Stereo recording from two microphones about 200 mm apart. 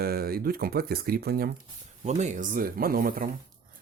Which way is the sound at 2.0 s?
35° right (ahead or behind).